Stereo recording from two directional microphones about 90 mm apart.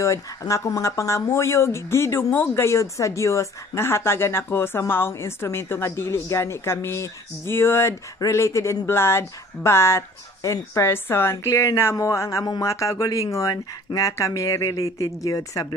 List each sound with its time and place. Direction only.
0.0 s speech: 35° left (ahead or behind)